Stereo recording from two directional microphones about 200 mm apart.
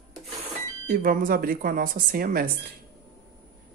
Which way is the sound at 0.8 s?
45° right (ahead or behind).